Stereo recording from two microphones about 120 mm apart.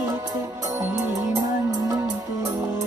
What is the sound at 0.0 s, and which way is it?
Music, 35° right (ahead or behind).